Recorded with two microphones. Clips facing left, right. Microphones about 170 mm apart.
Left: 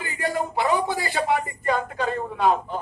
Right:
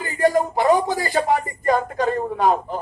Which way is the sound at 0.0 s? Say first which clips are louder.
Right 8 dB; 40° right (ahead or behind).